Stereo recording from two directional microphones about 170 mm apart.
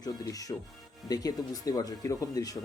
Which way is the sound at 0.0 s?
20° left (ahead or behind).